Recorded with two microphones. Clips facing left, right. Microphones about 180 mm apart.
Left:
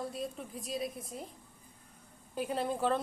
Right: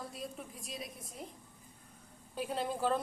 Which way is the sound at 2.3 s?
10° left (ahead or behind).